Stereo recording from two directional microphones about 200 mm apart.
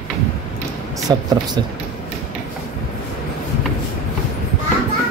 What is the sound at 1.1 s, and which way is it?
Speech, 20° right (ahead or behind).